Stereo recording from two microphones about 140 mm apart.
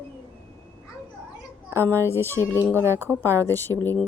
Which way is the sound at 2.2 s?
20° left (ahead or behind).